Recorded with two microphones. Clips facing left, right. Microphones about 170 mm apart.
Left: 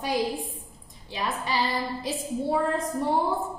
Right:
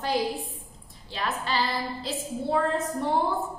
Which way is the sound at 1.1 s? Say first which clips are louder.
Even; 15° left (ahead or behind).